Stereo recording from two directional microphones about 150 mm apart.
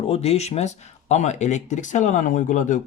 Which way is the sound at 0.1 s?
45° left (ahead or behind).